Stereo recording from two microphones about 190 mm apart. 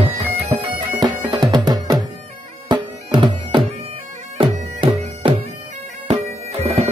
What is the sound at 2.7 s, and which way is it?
Music, 25° right (ahead or behind).